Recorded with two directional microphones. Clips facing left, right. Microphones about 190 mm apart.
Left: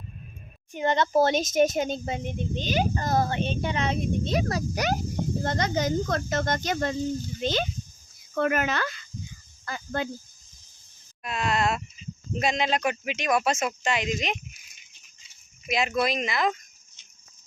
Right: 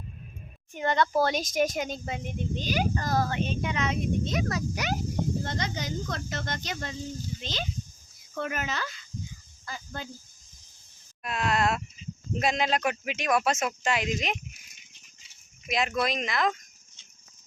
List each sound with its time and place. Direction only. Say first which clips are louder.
0.7 s speech: left 2 dB; 20° left (ahead or behind); by 10.1 s 65° left (ahead or behind)
11.2 s speech: left 1 dB; centre (ahead or behind)
15.7 s speech: left 2 dB; 5° left (ahead or behind)